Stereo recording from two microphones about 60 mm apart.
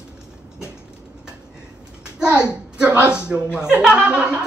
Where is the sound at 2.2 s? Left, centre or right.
Centre.